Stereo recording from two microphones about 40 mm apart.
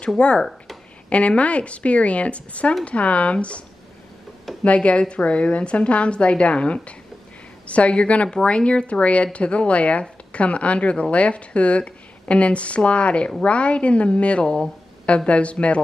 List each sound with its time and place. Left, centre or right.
0.2 s speech: left
4.6 s speech: left
14.4 s speech: centre
15.0 s speech: left